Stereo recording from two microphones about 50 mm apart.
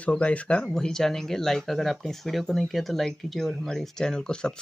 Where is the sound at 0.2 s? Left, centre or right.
Left.